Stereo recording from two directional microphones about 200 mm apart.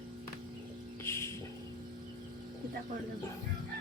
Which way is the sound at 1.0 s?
15° left (ahead or behind).